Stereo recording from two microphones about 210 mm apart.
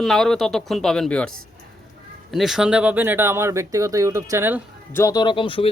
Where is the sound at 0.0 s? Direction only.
Centre (ahead or behind).